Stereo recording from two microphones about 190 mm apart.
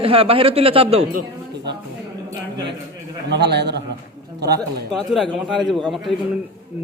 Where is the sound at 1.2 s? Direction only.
60° right (ahead or behind).